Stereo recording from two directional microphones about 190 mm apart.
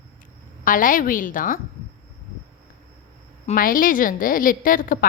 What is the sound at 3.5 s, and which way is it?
A woman's voice, 45° left (ahead or behind).